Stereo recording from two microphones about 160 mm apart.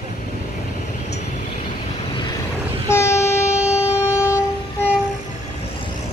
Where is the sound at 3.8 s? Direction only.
20° left (ahead or behind).